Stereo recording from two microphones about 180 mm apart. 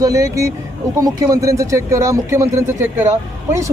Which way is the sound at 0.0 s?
15° right (ahead or behind).